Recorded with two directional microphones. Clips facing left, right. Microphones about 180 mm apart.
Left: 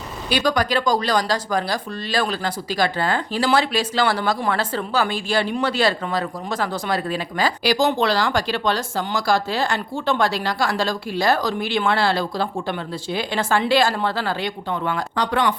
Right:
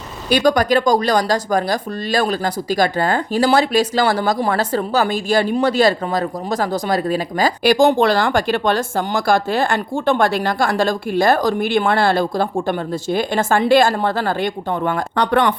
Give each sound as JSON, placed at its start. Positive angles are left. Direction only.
{"t": 0.3, "sound": "speech", "side_deg": -45}